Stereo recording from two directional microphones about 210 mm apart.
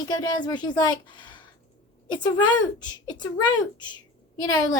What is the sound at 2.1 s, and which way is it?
Speech, 20° left (ahead or behind).